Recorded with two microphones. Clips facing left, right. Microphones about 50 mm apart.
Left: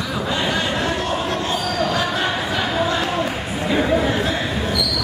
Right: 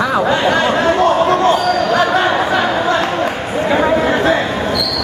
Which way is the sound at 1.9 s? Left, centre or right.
Right.